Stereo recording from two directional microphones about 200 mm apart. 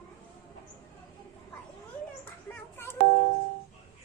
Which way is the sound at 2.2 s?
10° left (ahead or behind).